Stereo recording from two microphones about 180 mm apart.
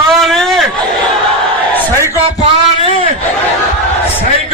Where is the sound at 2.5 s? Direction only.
35° right (ahead or behind).